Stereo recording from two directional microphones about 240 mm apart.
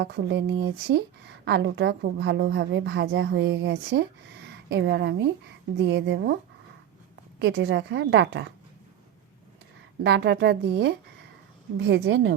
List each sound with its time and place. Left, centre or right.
0.0 s a woman's voice: right
7.3 s a woman's voice: right
10.0 s a woman's voice: right